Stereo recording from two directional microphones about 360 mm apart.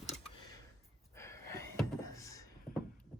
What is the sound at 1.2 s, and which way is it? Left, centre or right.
Gasp, centre.